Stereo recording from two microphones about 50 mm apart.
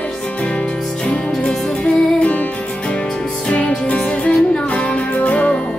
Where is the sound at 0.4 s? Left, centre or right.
Centre.